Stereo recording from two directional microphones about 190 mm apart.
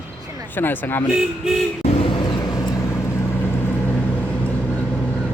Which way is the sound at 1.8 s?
30° left (ahead or behind).